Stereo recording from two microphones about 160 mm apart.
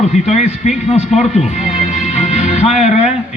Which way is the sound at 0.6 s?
45° left (ahead or behind).